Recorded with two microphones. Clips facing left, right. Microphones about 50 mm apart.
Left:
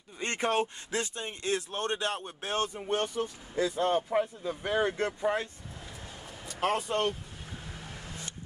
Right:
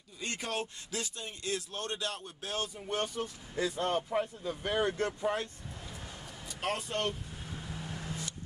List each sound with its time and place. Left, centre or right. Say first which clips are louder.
0.2 s speech: left 7 dB; left
6.6 s speech: left 5 dB; left